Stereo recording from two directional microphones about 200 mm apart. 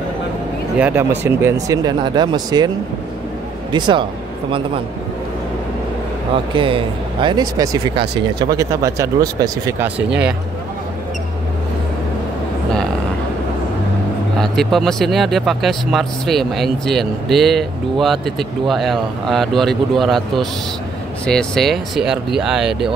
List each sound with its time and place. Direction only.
0.7 s speech: 5° right (ahead or behind)
3.7 s speech: 25° right (ahead or behind)
6.5 s speech: 25° right (ahead or behind); by 10.1 s 10° right (ahead or behind)
14.4 s speech: centre (ahead or behind)